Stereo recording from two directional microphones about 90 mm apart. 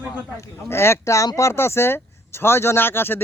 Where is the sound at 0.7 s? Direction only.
30° left (ahead or behind).